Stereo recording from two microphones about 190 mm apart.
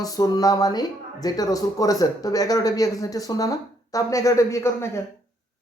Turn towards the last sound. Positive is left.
turn(degrees=15)  # may be behind; listen again after turning